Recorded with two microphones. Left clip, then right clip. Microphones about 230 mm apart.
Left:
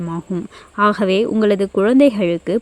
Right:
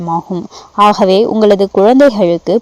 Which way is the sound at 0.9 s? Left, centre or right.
Centre.